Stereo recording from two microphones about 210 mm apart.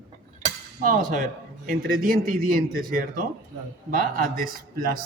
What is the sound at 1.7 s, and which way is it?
A man's voice, 40° right (ahead or behind).